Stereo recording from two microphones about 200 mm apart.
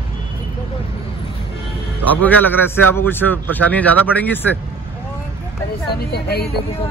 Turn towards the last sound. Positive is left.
turn(degrees=55)  # may be behind; listen again after turning